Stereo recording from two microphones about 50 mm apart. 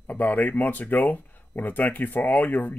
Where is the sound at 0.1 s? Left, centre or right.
Left.